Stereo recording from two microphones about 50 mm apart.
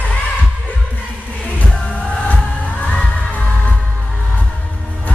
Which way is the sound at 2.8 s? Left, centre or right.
Left.